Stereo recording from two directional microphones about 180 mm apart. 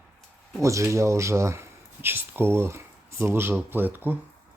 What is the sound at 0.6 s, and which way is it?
Speech, 15° right (ahead or behind).